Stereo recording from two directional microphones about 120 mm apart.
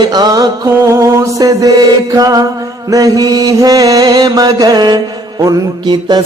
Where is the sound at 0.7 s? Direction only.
25° right (ahead or behind).